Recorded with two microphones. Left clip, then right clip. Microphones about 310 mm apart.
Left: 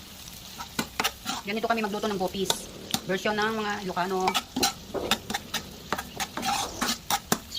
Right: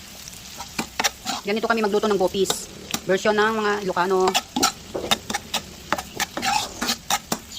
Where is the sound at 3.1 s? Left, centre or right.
Centre.